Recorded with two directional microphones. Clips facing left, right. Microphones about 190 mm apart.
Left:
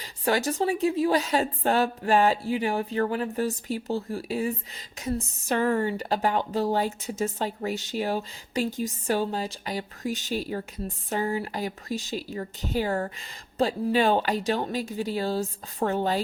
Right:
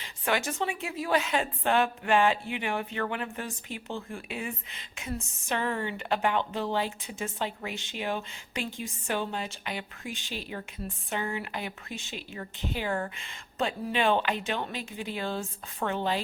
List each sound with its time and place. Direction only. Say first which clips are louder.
0.0 s a woman's voice: left 4 dB; 35° left (ahead or behind)